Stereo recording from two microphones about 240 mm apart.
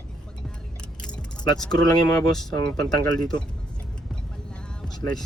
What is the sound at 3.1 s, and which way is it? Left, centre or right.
Speech, centre.